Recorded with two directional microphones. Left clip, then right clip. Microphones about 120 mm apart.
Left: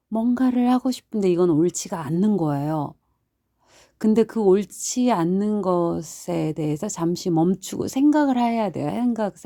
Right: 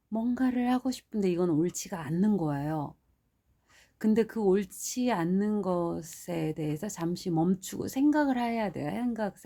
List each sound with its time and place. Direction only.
0.1 s speech: 35° left (ahead or behind)
3.9 s speech: 45° left (ahead or behind)
7.4 s speech: 45° left (ahead or behind)